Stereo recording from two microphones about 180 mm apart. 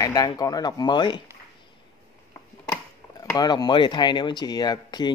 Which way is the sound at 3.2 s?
20° left (ahead or behind).